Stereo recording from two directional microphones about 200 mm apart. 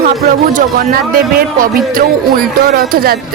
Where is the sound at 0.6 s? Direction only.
45° right (ahead or behind).